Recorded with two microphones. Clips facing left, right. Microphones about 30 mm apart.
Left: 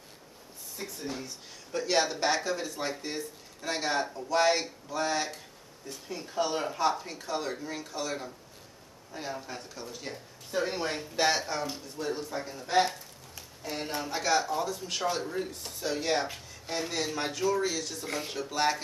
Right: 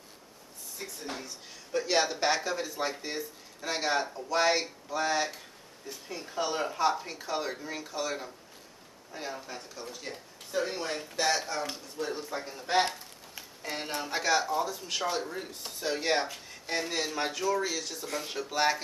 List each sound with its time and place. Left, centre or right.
0.8 s speech: centre
12.0 s speech: centre
12.6 s a sound: right
13.9 s speech: centre
16.8 s speech: centre